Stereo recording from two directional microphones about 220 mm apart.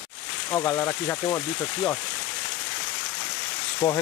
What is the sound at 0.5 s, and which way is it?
Speech, 10° left (ahead or behind).